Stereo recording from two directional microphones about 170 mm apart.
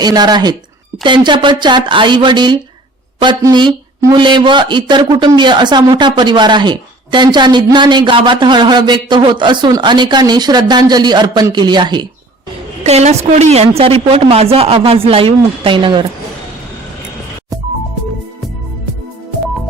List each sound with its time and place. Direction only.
0.0 s speech: 25° right (ahead or behind)
12.8 s a woman's voice: 40° right (ahead or behind)